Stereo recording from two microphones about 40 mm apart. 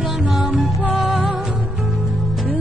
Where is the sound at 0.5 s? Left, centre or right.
Right.